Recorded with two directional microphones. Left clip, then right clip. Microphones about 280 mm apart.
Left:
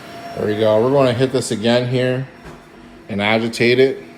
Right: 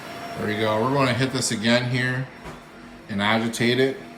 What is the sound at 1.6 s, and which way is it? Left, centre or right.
Speech, right.